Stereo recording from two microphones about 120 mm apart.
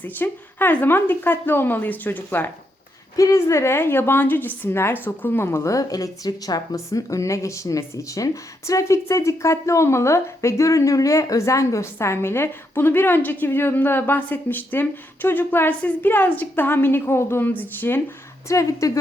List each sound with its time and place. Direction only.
0.0 s a woman's voice: 15° left (ahead or behind)